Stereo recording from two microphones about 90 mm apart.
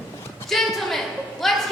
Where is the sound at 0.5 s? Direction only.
Centre (ahead or behind).